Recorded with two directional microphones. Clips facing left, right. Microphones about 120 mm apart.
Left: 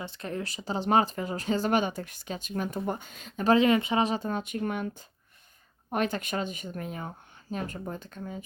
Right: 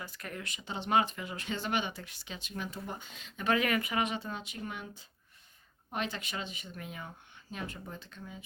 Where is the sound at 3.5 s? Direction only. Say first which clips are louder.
Left 8 dB; 25° left (ahead or behind); by 4.9 s 55° left (ahead or behind).